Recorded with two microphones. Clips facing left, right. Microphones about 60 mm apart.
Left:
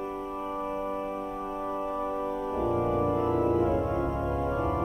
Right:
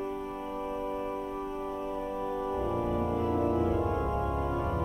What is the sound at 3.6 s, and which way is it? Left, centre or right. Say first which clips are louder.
Music: left 2 dB; left.